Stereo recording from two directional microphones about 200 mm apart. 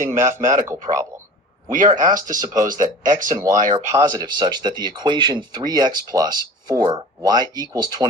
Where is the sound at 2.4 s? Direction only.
20° right (ahead or behind).